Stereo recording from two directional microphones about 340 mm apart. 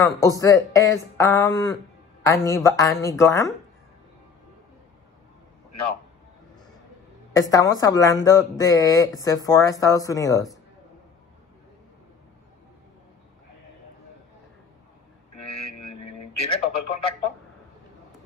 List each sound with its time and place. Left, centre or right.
0.0 s speech: centre
7.5 s speech: centre
15.3 s a sound: left
16.4 s speech: centre